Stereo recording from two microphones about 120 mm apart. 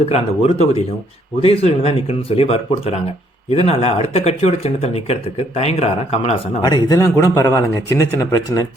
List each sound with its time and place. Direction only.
0.0 s speech: 60° left (ahead or behind)
6.6 s a man's voice: 35° left (ahead or behind)